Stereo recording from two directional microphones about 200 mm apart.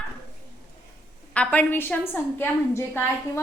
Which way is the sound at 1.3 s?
5° left (ahead or behind).